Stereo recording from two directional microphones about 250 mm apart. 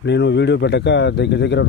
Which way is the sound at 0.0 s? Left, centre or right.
Left.